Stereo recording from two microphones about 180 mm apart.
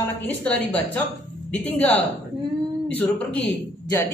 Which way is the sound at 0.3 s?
10° left (ahead or behind).